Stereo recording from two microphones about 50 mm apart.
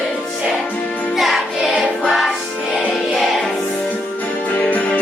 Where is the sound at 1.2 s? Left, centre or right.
Centre.